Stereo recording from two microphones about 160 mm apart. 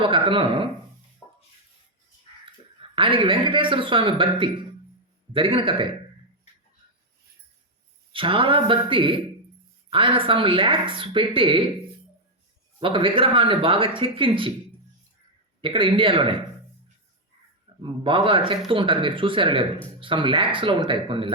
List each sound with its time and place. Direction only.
0.0 s speech: 35° right (ahead or behind)
1.2 s a sound: 10° left (ahead or behind)
2.9 s speech: 35° right (ahead or behind)
8.1 s speech: 35° right (ahead or behind)
12.8 s speech: 35° right (ahead or behind)
15.6 s speech: 30° right (ahead or behind)
17.8 s speech: 30° right (ahead or behind)